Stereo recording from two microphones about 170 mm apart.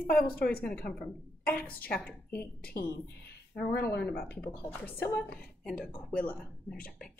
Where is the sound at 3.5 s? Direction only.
70° left (ahead or behind).